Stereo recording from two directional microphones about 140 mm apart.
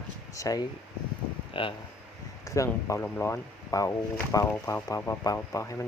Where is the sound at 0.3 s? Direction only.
25° left (ahead or behind).